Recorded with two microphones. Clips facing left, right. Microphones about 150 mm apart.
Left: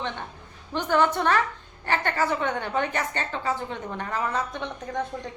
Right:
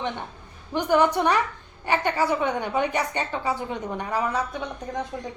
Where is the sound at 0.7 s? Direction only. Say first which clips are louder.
Right 2 dB; 10° right (ahead or behind).